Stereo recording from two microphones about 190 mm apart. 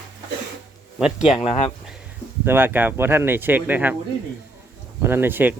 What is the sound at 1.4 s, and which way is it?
Speech, 30° left (ahead or behind).